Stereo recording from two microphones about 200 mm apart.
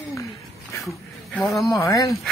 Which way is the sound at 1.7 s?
15° left (ahead or behind).